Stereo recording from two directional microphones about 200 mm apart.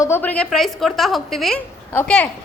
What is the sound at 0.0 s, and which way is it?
A woman's voice, 10° left (ahead or behind).